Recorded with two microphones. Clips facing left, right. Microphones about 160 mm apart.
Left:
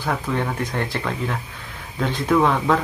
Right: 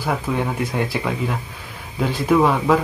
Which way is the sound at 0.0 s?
10° right (ahead or behind).